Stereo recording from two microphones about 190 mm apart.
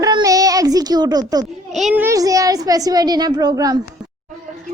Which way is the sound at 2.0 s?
20° right (ahead or behind).